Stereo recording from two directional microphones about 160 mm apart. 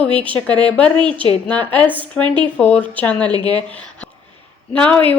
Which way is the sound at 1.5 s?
10° left (ahead or behind).